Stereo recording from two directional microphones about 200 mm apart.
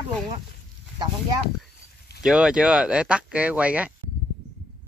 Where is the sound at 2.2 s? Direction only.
5° right (ahead or behind).